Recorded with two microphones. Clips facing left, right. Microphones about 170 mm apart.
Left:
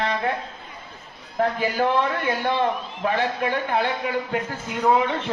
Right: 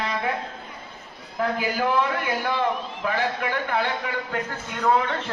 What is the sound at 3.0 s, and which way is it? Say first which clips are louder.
Speech: left 3 dB; 25° left (ahead or behind).